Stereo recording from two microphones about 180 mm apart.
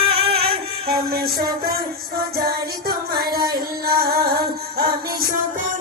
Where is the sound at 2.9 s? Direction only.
55° right (ahead or behind).